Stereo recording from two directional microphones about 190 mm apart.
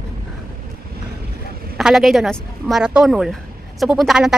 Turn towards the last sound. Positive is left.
turn(degrees=0)  # may be behind; listen again after turning